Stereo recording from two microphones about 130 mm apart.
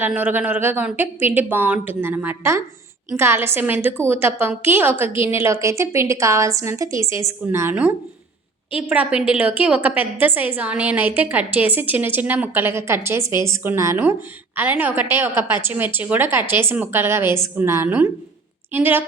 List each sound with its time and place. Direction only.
0.0 s a woman's voice: 15° right (ahead or behind)